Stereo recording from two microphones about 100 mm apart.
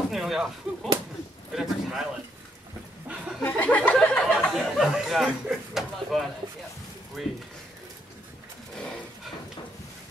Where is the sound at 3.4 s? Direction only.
15° left (ahead or behind).